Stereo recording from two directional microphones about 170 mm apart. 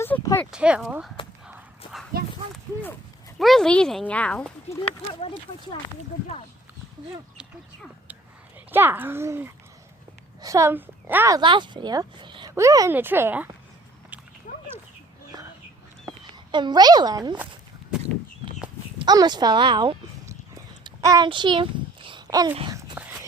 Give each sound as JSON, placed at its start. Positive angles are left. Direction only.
{"t": 0.0, "sound": "a sound", "side_deg": 15}
{"t": 0.5, "sound": "speech", "side_deg": -5}
{"t": 1.5, "sound": "a sound", "side_deg": -5}
{"t": 3.3, "sound": "speech", "side_deg": 0}
{"t": 5.2, "sound": "speech", "side_deg": 35}
{"t": 8.7, "sound": "speech", "side_deg": -10}
{"t": 11.3, "sound": "speech", "side_deg": -30}
{"t": 14.5, "sound": "dog", "side_deg": 50}
{"t": 16.5, "sound": "speech", "side_deg": -25}
{"t": 18.9, "sound": "speech", "side_deg": -25}
{"t": 20.6, "sound": "a sound", "side_deg": -20}